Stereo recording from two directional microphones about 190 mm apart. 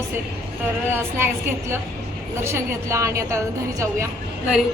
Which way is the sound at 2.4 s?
15° right (ahead or behind).